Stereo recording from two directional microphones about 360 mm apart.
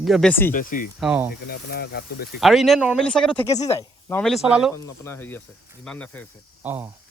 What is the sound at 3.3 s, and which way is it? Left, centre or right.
Speech, centre.